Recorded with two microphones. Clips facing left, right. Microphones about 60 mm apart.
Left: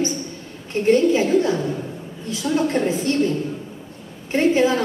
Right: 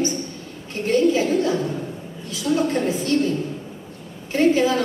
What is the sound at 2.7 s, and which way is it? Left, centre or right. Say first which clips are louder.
Speech: left 1 dB; left.